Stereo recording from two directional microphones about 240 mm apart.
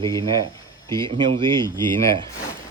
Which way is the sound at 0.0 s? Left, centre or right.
Centre.